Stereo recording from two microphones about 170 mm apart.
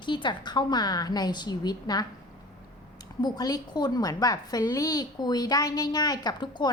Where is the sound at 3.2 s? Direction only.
25° left (ahead or behind).